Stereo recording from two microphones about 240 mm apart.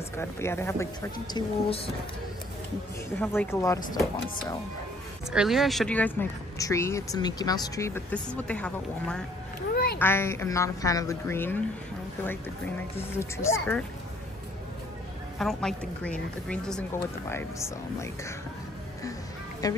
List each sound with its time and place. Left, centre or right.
0.2 s speech: centre
3.2 s speech: centre
5.3 s speech: centre
12.9 s speech: centre
15.3 s a woman's voice: centre
19.6 s speech: centre